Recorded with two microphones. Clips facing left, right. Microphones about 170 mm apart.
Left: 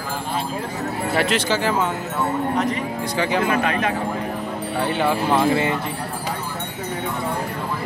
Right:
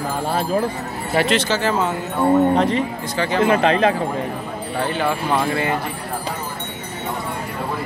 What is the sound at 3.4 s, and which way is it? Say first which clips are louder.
Speech: right 5 dB; 30° right (ahead or behind).